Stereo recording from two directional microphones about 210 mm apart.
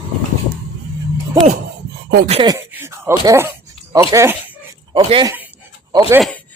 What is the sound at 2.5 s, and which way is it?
Speech, 10° right (ahead or behind).